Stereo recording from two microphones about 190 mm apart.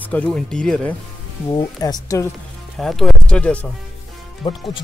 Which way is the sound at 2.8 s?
Centre (ahead or behind).